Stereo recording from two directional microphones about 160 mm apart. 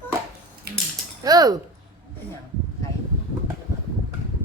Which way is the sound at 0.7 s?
75° right (ahead or behind).